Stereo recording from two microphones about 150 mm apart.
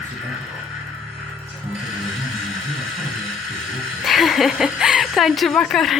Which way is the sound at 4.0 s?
Centre (ahead or behind).